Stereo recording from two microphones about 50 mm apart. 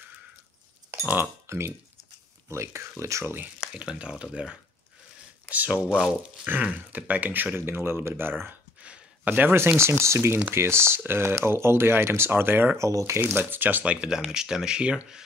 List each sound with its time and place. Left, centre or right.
1.0 s speech: right
2.5 s speech: right
3.0 s speech: right
3.7 s speech: centre
5.7 s speech: right
6.4 s speech: right
7.5 s speech: right
8.8 s a sound: right
9.3 s speech: right
9.8 s speech: right
12.7 s speech: right
13.2 s speech: right
13.8 s speech: centre